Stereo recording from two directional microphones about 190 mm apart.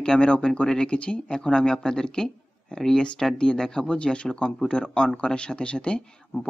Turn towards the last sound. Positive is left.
turn(degrees=5)  # may be behind; listen again after turning